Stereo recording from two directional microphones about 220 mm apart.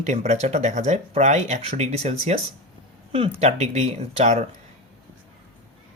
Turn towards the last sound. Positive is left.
turn(degrees=-30)  # may be behind; listen again after turning